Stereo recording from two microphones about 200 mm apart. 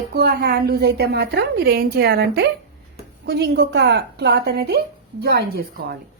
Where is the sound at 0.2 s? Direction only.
55° right (ahead or behind).